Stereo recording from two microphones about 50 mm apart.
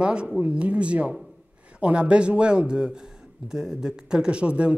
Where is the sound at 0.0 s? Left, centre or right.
Centre.